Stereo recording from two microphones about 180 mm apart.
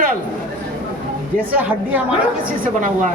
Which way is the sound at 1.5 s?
10° right (ahead or behind).